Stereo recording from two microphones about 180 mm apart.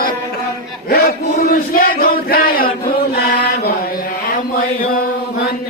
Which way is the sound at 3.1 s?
55° left (ahead or behind).